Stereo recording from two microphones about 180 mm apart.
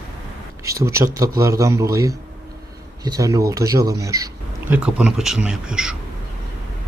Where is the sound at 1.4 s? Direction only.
15° right (ahead or behind).